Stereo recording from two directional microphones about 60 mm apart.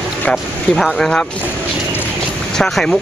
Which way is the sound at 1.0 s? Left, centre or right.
Centre.